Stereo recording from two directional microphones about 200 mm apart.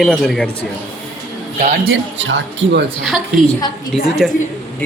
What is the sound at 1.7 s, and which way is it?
Speech, 80° right.